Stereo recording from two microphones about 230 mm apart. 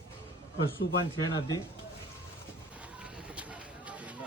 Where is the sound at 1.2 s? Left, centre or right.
Centre.